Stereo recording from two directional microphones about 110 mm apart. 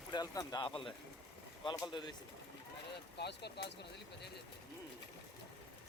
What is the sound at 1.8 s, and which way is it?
Speech, 45° left (ahead or behind).